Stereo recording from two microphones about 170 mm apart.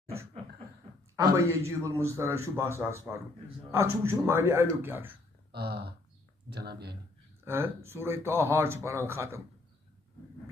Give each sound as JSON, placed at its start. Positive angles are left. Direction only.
{"t": 1.1, "sound": "a man's voice", "side_deg": -15}
{"t": 5.5, "sound": "speech", "side_deg": -70}
{"t": 7.4, "sound": "a man's voice", "side_deg": -15}